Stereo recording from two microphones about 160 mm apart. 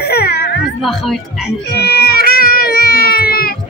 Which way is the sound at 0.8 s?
Centre (ahead or behind).